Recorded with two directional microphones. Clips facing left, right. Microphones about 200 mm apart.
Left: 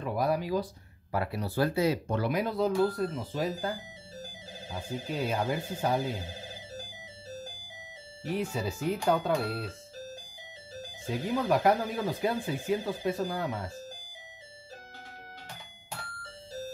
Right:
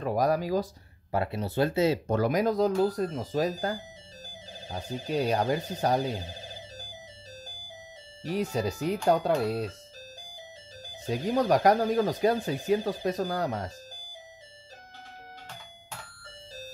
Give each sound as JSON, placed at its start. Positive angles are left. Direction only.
{"t": 0.0, "sound": "speech", "side_deg": -40}
{"t": 1.1, "sound": "speech", "side_deg": -25}
{"t": 2.0, "sound": "speech", "side_deg": -40}
{"t": 4.7, "sound": "speech", "side_deg": -40}
{"t": 8.2, "sound": "speech", "side_deg": -40}
{"t": 11.1, "sound": "speech", "side_deg": -40}